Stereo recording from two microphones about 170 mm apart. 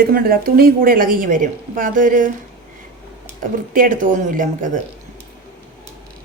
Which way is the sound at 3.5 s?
55° right (ahead or behind).